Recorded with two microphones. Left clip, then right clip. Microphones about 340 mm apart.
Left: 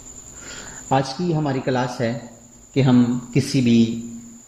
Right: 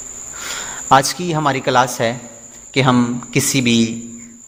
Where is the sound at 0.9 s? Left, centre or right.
Right.